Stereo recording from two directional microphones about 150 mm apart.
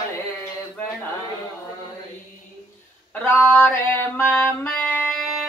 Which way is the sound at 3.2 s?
15° left (ahead or behind).